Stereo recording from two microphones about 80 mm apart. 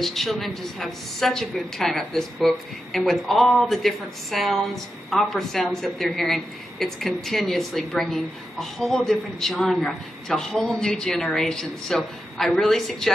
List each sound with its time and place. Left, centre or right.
0.0 s a woman's voice: centre